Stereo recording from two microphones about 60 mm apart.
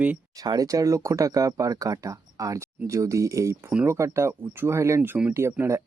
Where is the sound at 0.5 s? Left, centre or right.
Right.